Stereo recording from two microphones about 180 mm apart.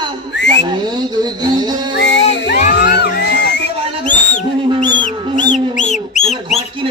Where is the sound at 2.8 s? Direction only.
50° left (ahead or behind).